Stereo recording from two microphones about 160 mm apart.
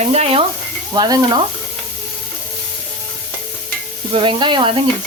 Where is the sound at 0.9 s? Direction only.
25° right (ahead or behind).